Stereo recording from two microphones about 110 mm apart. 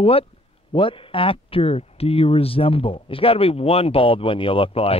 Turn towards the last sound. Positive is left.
turn(degrees=60)  # may be behind; listen again after turning